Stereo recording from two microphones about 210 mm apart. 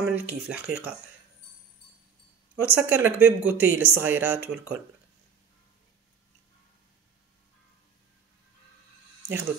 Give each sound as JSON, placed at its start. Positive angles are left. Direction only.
{"t": 0.0, "sound": "speech", "side_deg": -10}
{"t": 2.5, "sound": "speech", "side_deg": -10}